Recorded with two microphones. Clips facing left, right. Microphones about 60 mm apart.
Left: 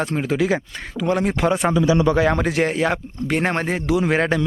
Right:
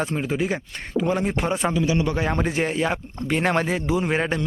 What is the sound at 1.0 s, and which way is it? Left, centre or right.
Speech, left.